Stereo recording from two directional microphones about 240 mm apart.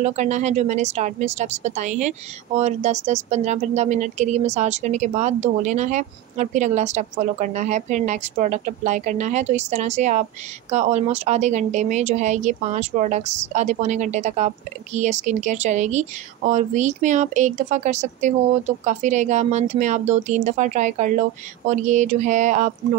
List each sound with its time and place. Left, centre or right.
0.0 s speech: right